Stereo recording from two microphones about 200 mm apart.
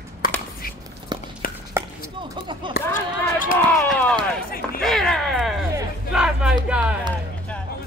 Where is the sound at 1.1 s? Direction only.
20° right (ahead or behind).